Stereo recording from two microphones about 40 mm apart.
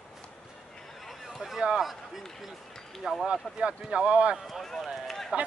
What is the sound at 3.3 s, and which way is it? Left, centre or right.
Speech, right.